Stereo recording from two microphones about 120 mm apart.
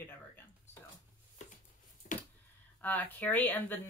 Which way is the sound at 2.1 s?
90° left.